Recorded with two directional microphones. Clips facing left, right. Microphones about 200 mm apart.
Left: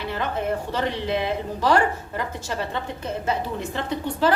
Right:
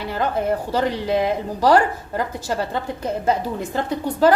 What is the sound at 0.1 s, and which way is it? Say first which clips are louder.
A woman's voice: right 5 dB; 40° right (ahead or behind).